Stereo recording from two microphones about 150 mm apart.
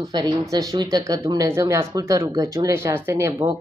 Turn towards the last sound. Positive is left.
turn(degrees=-20)  # may be behind; listen again after turning